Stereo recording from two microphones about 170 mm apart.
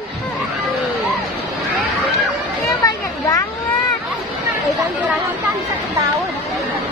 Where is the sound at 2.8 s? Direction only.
20° left (ahead or behind).